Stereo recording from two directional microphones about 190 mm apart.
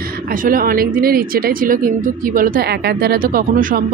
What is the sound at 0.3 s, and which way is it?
Speech, 45° right (ahead or behind).